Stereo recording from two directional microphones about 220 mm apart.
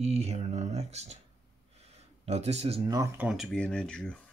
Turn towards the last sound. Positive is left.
turn(degrees=5)  # may be behind; listen again after turning